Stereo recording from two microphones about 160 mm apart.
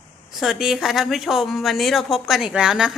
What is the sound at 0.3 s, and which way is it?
Speech, centre (ahead or behind).